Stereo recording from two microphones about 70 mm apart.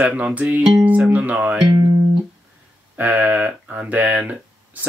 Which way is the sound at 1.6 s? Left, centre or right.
Right.